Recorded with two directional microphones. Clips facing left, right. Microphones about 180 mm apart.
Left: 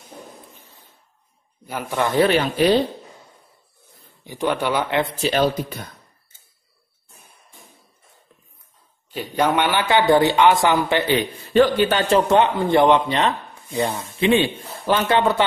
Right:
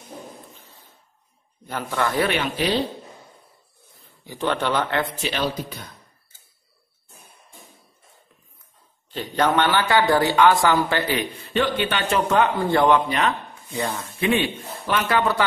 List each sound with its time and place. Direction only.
0.6 s a sound: 15° left (ahead or behind)
1.7 s speech: 15° left (ahead or behind)
2.3 s speech: 45° left (ahead or behind)
4.2 s speech: 15° left (ahead or behind)
5.2 s speech: 45° left (ahead or behind)
9.1 s a man's voice: 10° left (ahead or behind)
11.1 s a man's voice: 35° left (ahead or behind); by 14.0 s 20° left (ahead or behind)
14.9 s a man's voice: 30° left (ahead or behind)